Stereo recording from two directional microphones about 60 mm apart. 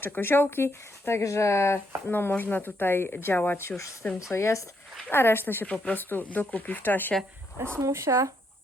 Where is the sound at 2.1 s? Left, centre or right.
Left.